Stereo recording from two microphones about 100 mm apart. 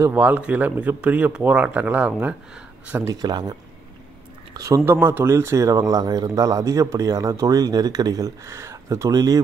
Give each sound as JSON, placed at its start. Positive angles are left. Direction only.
{"t": 0.0, "sound": "speech", "side_deg": -15}
{"t": 3.1, "sound": "speech", "side_deg": -45}
{"t": 4.6, "sound": "speech", "side_deg": -35}
{"t": 4.8, "sound": "speech", "side_deg": -20}